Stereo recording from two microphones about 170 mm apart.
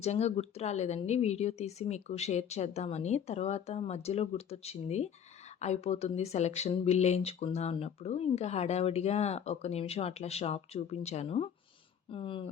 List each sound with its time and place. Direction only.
0.0 s speech: 40° left (ahead or behind)